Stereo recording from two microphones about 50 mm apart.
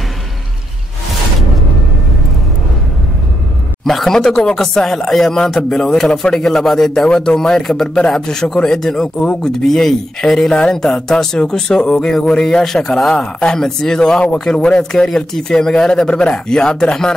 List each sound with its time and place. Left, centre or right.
3.8 s speech: centre
7.0 s speech: centre